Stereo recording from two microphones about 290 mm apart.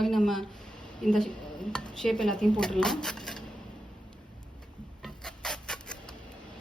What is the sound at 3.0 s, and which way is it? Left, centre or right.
Dishes, centre.